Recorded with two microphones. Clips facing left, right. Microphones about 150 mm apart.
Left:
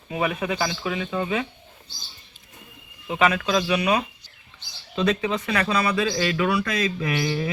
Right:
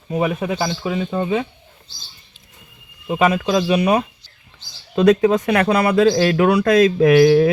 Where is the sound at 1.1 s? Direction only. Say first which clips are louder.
Right 5 dB; 25° right (ahead or behind).